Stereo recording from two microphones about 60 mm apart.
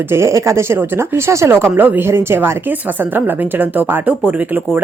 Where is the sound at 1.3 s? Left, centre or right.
Right.